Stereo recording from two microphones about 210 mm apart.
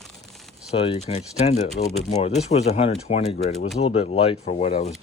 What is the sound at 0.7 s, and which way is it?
Speech, 30° left (ahead or behind).